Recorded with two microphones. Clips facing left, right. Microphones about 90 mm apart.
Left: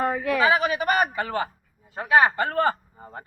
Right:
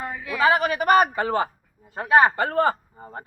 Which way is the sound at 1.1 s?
30° right (ahead or behind).